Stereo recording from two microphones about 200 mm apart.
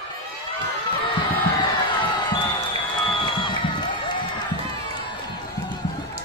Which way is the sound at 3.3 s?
25° left (ahead or behind).